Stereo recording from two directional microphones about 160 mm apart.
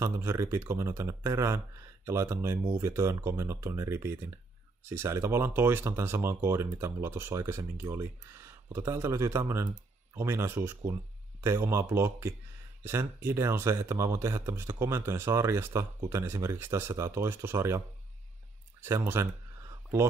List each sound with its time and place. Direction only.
0.0 s speech: 15° right (ahead or behind)